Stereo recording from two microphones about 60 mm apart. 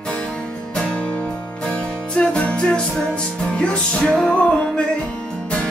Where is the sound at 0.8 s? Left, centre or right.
Left.